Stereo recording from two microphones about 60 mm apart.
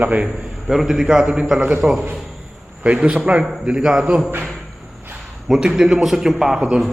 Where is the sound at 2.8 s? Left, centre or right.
Right.